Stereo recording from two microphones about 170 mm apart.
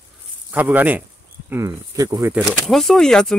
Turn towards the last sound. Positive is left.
turn(degrees=5)  # may be behind; listen again after turning